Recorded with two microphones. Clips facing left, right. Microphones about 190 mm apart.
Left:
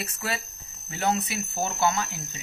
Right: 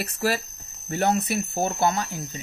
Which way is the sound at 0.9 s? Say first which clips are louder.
Right 4 dB; 55° right (ahead or behind).